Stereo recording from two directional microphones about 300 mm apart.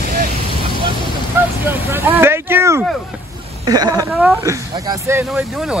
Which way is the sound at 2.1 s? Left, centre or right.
Centre.